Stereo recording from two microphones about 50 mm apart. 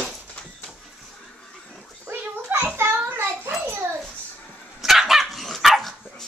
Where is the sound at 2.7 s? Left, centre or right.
Right.